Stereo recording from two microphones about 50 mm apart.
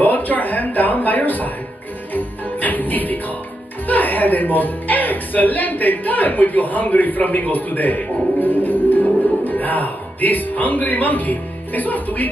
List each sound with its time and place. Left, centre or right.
0.0 s speech: left
2.1 s music: left
3.8 s speech: left